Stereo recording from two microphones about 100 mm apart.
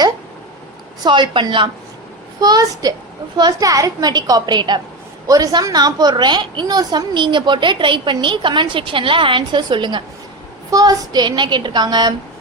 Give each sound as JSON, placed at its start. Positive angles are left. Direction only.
{"t": 1.0, "sound": "a woman's voice", "side_deg": -50}
{"t": 2.4, "sound": "a woman's voice", "side_deg": -40}
{"t": 5.3, "sound": "a woman's voice", "side_deg": -35}
{"t": 10.7, "sound": "a woman's voice", "side_deg": -35}